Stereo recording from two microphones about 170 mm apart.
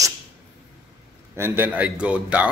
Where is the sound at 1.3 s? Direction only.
15° right (ahead or behind).